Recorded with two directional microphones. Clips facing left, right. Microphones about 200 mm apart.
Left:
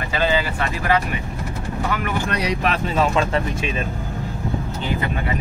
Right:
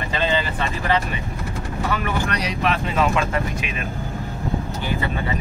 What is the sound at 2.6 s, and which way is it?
Speech, 35° left (ahead or behind).